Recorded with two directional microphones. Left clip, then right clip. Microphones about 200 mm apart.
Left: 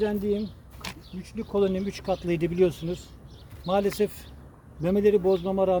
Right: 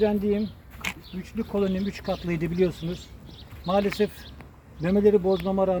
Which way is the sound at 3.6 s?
25° left (ahead or behind).